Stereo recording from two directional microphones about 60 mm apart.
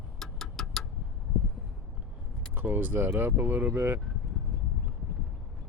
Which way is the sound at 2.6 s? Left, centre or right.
Right.